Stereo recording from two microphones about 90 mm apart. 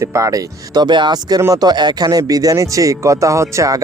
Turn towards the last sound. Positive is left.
turn(degrees=-35)  # may be behind; listen again after turning